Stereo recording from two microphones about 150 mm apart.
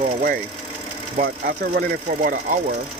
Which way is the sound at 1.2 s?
80° right.